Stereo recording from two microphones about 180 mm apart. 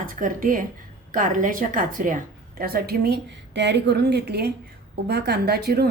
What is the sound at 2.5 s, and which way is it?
A woman's voice, 60° right (ahead or behind).